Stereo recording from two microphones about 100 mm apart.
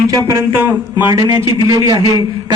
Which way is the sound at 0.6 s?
25° right (ahead or behind).